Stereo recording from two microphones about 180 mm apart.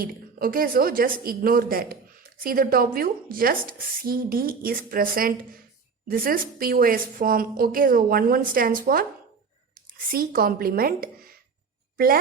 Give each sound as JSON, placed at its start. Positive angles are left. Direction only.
{"t": 0.0, "sound": "a woman's voice", "side_deg": -55}